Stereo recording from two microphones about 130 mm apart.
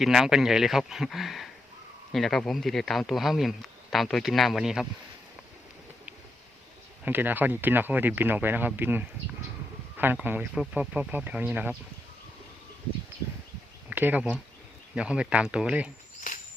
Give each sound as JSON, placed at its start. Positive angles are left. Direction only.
{"t": 0.0, "sound": "speech", "side_deg": 0}
{"t": 7.0, "sound": "speech", "side_deg": -15}
{"t": 13.9, "sound": "speech", "side_deg": -15}
{"t": 16.3, "sound": "cricket", "side_deg": 90}